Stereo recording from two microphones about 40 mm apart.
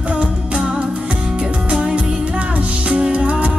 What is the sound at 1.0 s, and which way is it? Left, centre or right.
Music, right.